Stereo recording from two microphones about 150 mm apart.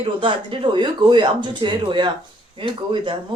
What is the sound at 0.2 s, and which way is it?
Speech, 35° right (ahead or behind).